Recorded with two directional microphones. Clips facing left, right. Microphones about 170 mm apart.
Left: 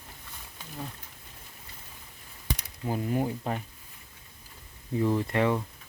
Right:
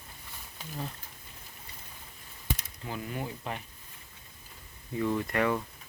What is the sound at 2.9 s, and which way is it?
Speech, 40° left (ahead or behind).